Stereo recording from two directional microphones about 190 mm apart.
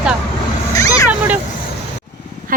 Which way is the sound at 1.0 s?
10° right (ahead or behind).